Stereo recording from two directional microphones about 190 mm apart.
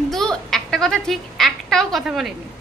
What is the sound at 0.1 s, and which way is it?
A woman's voice, centre (ahead or behind).